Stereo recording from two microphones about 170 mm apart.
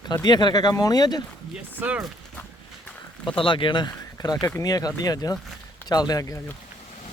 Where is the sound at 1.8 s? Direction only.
5° right (ahead or behind).